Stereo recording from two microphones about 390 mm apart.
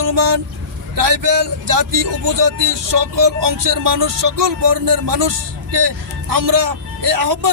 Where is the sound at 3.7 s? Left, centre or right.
Right.